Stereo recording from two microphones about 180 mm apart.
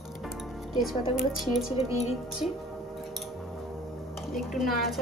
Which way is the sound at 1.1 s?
Centre (ahead or behind).